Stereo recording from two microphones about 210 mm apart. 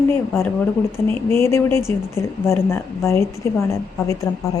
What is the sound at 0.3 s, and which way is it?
A woman's voice, 10° left (ahead or behind).